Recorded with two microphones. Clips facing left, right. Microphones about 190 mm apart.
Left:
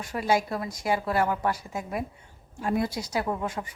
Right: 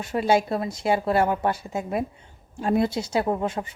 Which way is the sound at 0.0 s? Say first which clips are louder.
Right 4 dB; 25° right (ahead or behind).